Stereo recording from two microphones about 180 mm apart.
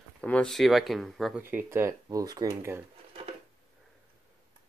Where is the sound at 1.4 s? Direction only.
15° right (ahead or behind).